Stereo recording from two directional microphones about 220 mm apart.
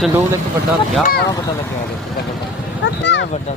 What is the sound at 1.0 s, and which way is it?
Speech, 45° left (ahead or behind).